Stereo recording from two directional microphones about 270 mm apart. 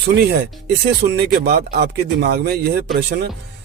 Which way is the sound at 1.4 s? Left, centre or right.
Right.